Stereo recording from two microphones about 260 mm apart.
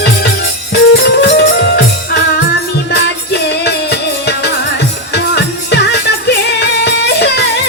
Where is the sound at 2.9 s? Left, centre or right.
Left.